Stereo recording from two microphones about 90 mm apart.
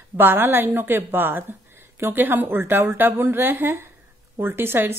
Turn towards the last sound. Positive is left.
turn(degrees=-25)  # may be behind; listen again after turning